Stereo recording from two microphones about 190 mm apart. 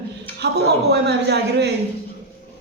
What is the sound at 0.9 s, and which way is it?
Speech, 60° right (ahead or behind).